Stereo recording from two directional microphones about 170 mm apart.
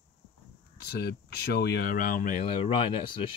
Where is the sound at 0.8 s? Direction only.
70° left (ahead or behind); by 2.4 s 50° left (ahead or behind).